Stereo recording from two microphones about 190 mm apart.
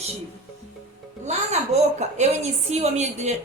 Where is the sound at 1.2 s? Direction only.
35° right (ahead or behind).